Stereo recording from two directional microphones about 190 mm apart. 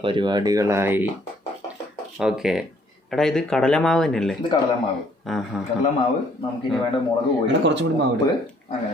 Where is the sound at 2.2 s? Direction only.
5° right (ahead or behind).